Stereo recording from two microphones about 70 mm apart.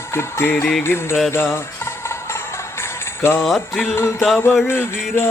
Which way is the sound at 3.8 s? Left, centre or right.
Left.